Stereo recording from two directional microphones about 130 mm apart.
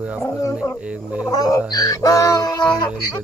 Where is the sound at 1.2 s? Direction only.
25° left (ahead or behind).